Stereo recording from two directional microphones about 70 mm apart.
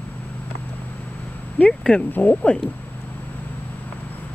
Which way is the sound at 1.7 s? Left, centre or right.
Centre.